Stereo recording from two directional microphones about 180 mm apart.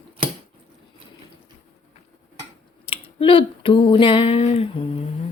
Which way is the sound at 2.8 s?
30° left (ahead or behind).